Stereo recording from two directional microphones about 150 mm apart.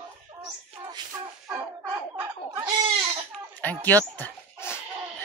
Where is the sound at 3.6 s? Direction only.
10° left (ahead or behind).